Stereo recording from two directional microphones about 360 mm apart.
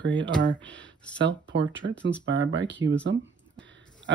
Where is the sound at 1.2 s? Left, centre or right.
Right.